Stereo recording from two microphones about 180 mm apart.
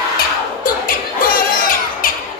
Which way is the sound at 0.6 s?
50° left (ahead or behind).